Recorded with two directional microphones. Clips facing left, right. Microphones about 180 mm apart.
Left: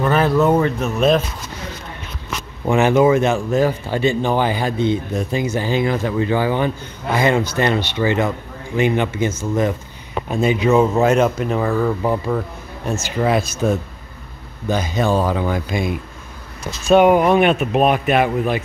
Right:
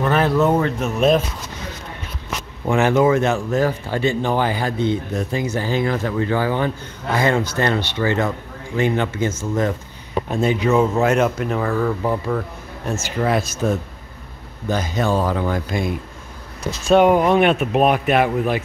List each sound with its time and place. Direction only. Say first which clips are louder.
0.0 s speech: left 1 dB; centre (ahead or behind)
2.6 s speech: left 2 dB; 15° left (ahead or behind)
14.7 s speech: left 2 dB; 15° left (ahead or behind); by 18.6 s centre (ahead or behind)